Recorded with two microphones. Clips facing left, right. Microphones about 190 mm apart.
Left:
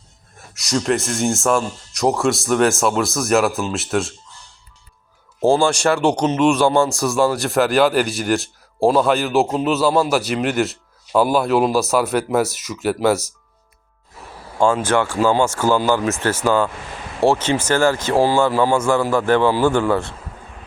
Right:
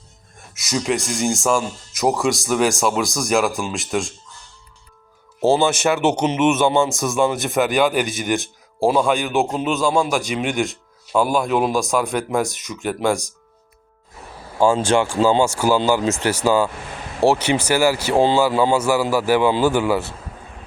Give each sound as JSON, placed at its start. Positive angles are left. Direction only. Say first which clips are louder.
{"t": 0.3, "sound": "speech", "louder": "left 2 dB", "side_deg": 0}
{"t": 6.1, "sound": "speech", "louder": "left 1 dB", "side_deg": -10}
{"t": 14.8, "sound": "speech", "louder": "right 1 dB", "side_deg": -10}
{"t": 15.2, "sound": "speech", "louder": "even", "side_deg": -25}
{"t": 15.4, "sound": "speech", "louder": "even", "side_deg": -10}
{"t": 18.5, "sound": "speech", "louder": "even", "side_deg": -20}
{"t": 18.8, "sound": "speech", "louder": "left 1 dB", "side_deg": -5}